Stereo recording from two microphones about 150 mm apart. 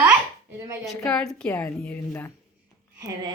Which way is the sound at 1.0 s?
5° left (ahead or behind).